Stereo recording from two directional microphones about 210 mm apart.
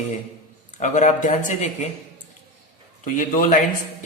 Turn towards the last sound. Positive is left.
turn(degrees=40)  # may be behind; listen again after turning